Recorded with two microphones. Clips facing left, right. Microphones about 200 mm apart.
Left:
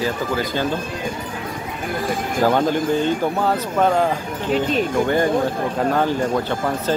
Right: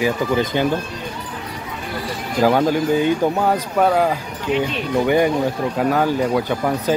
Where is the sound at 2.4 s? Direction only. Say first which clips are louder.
Right 2 dB; 10° right (ahead or behind).